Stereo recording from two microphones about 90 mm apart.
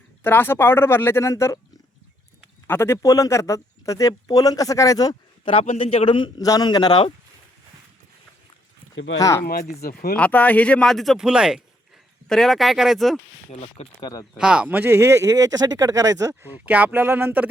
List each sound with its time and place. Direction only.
0.2 s speech: 25° left (ahead or behind)
2.6 s speech: 30° left (ahead or behind)
5.5 s a man's voice: 85° left; by 7.0 s 55° left (ahead or behind)
9.1 s speech: 40° left (ahead or behind)
10.2 s speech: 15° left (ahead or behind); by 11.6 s 10° right (ahead or behind)
12.3 s speech: 5° left (ahead or behind)
14.0 s speech: 40° left (ahead or behind)
14.3 s speech: 10° right (ahead or behind); by 16.3 s 40° right (ahead or behind)
16.4 s speech: 20° right (ahead or behind)